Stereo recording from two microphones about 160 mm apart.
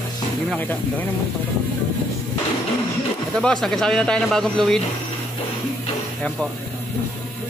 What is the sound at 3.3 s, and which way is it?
Speech, 5° left (ahead or behind).